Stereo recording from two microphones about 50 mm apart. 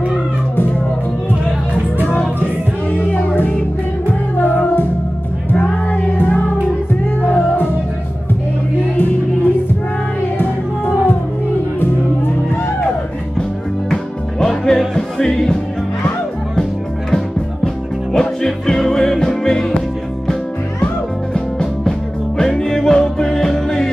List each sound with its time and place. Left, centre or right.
2.0 s music: left
5.9 s music: left
8.9 s music: left
14.4 s music: centre
18.1 s music: centre
21.3 s music: centre